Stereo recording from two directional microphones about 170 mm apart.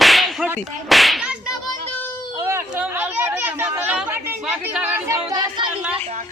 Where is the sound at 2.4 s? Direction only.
15° right (ahead or behind).